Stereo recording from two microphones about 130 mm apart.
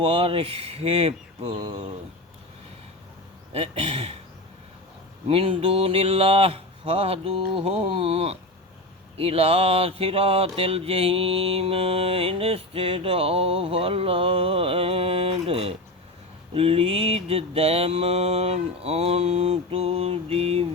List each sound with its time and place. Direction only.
0.0 s mantra: 45° right (ahead or behind)
3.5 s mantra: 45° right (ahead or behind)
5.3 s mantra: 50° right (ahead or behind)